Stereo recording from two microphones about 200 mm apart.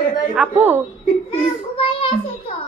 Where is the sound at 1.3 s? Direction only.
30° left (ahead or behind).